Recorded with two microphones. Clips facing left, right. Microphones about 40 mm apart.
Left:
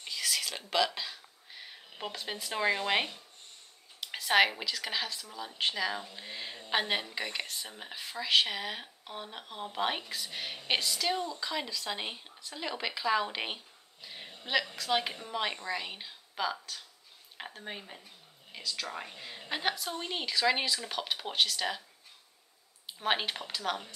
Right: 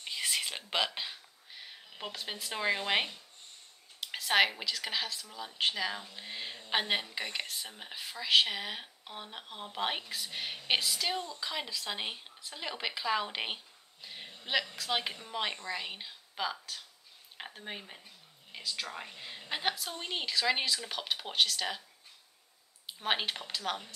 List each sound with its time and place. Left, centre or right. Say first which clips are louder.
0.1 s whispering: even; right
1.5 s speech: left 1 dB; centre
14.0 s a sound: even; centre
14.8 s speech: left 3 dB; centre
18.9 s speech: left 2 dB; centre
22.9 s speech: left 2 dB; centre